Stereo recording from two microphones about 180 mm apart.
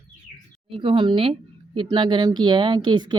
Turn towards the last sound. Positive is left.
turn(degrees=-25)  # may be behind; listen again after turning